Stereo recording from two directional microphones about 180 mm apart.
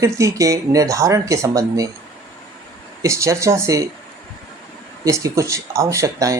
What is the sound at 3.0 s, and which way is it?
Speech, 15° right (ahead or behind).